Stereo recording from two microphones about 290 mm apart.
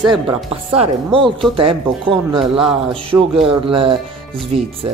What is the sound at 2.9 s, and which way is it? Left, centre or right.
A man's voice, centre.